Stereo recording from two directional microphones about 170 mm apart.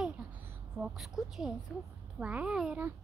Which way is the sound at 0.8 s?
5° right (ahead or behind).